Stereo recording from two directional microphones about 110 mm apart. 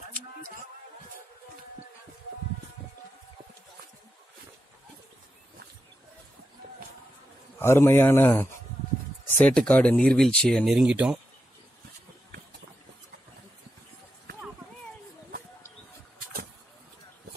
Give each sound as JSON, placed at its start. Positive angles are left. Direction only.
{"t": 7.5, "sound": "speech", "side_deg": 25}
{"t": 9.4, "sound": "speech", "side_deg": 10}